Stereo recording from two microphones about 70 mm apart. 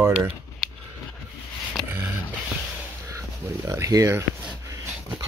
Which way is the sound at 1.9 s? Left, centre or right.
Right.